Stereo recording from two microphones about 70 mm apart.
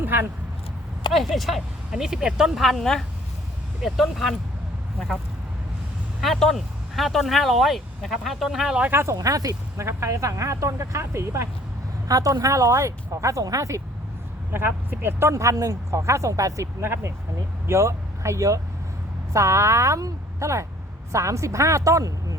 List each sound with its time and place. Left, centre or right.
0.0 s a sound: right
1.1 s speech: centre
2.6 s speech: centre
6.2 s speech: centre
8.9 s speech: right
9.1 s speech: right
9.8 s speech: right
12.0 s speech: right
14.5 s speech: right
15.3 s speech: right
16.8 s speech: right